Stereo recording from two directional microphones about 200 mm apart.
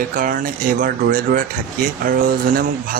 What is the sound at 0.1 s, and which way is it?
A man's voice, 40° right (ahead or behind).